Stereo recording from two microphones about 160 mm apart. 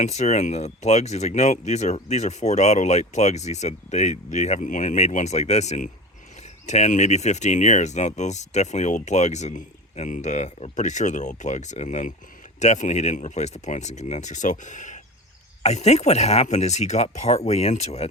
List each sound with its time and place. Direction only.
0.0 s speech: 45° left (ahead or behind)